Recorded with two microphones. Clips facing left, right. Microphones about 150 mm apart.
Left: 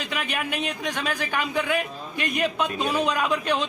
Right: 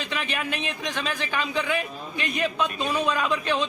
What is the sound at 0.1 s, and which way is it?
Speech, 10° left (ahead or behind).